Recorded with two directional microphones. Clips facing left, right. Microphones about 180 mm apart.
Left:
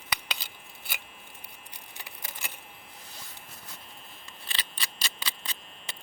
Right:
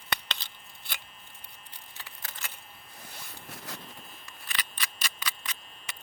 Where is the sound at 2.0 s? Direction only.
15° left (ahead or behind).